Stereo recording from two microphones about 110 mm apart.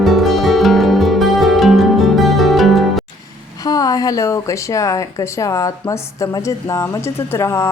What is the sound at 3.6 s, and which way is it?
A woman's voice, 35° left (ahead or behind).